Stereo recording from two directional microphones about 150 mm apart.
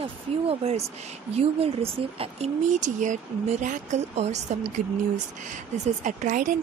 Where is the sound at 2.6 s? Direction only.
55° right (ahead or behind).